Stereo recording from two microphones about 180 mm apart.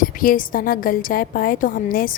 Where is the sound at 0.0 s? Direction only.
50° left (ahead or behind).